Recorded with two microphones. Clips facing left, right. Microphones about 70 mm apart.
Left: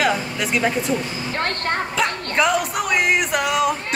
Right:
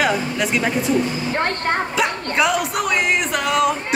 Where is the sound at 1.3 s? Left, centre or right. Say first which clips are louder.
Even; centre.